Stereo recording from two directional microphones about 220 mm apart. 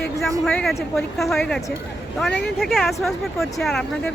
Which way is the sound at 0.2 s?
5° left (ahead or behind).